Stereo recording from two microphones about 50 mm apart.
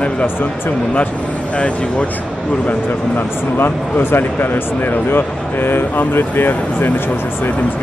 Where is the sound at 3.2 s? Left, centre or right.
Left.